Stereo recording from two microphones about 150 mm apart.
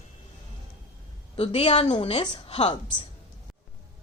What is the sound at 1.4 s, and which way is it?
A woman's voice, 45° left (ahead or behind).